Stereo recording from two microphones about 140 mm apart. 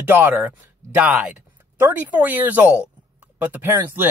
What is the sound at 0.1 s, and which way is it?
Speech, 15° right (ahead or behind).